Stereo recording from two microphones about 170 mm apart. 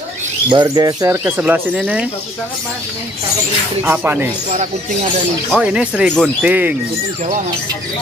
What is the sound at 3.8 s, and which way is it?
Speech, 10° right (ahead or behind).